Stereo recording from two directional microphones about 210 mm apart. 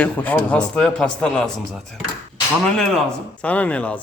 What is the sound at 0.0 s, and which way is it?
A man's voice, 5° left (ahead or behind).